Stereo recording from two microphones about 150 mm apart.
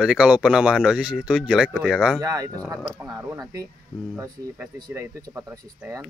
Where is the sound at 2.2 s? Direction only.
20° right (ahead or behind).